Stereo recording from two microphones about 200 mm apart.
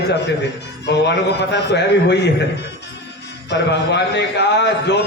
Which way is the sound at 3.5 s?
60° left (ahead or behind).